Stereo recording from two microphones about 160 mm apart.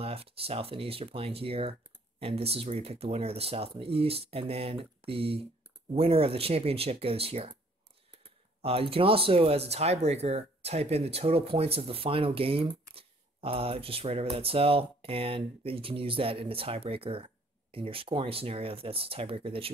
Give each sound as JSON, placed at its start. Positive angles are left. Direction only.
{"t": 0.0, "sound": "speech", "side_deg": -35}
{"t": 8.6, "sound": "speech", "side_deg": -35}